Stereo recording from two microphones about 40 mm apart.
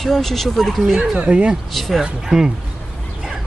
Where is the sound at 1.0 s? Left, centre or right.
Right.